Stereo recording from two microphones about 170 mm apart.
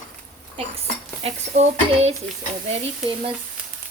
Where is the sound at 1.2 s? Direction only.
40° right (ahead or behind).